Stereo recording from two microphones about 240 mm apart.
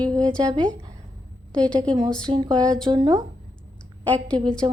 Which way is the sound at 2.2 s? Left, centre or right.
Centre.